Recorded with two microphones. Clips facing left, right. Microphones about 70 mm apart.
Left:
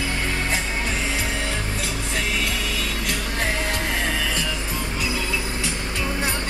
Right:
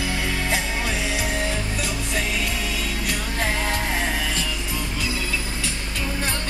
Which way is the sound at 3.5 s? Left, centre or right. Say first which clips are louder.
Even; right.